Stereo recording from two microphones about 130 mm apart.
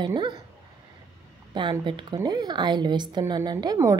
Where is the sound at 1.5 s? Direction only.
40° right (ahead or behind).